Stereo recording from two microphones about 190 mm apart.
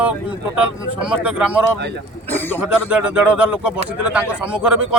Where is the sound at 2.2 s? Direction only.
10° left (ahead or behind).